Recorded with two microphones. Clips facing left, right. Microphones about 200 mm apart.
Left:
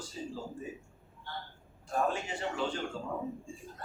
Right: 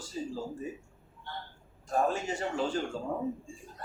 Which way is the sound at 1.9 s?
40° right (ahead or behind).